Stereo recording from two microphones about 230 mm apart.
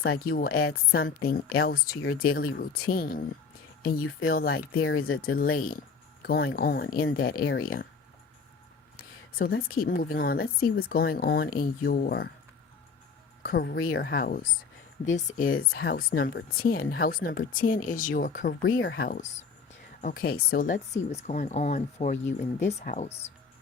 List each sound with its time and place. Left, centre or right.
0.3 s speech: left
4.5 s speech: left
5.2 s speech: left
9.0 s speech: left
13.4 s speech: left